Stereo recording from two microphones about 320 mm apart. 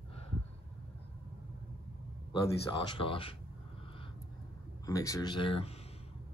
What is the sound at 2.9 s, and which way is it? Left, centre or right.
Speech, centre.